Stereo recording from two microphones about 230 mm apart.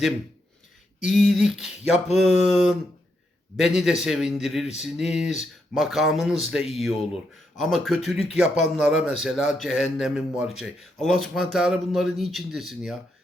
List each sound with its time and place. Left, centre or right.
1.0 s a man's voice: centre